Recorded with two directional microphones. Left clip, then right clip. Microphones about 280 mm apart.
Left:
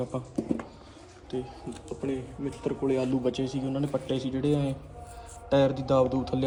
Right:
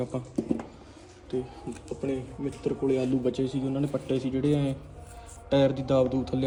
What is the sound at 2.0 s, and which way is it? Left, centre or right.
Speech, centre.